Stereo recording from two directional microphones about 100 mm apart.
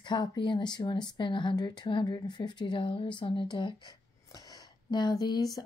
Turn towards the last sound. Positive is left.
turn(degrees=40)  # may be behind; listen again after turning